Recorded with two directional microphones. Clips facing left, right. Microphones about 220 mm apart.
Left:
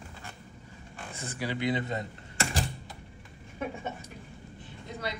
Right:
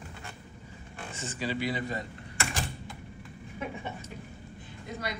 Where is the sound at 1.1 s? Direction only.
10° left (ahead or behind).